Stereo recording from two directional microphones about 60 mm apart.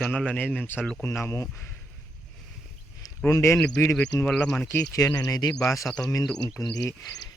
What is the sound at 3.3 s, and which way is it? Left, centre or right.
Speech, left.